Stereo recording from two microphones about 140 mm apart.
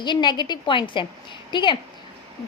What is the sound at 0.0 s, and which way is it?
A woman's voice, 30° left (ahead or behind).